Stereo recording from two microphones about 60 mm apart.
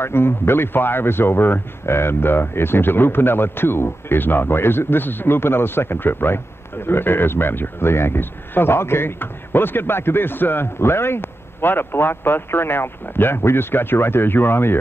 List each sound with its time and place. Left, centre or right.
0.0 s speech: left